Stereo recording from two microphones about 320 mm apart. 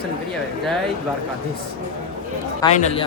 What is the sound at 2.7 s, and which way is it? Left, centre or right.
Speech, left.